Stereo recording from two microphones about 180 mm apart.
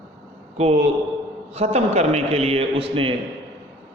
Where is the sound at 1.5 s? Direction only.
35° right (ahead or behind).